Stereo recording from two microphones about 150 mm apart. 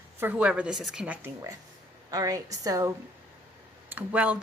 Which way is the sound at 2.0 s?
25° right (ahead or behind).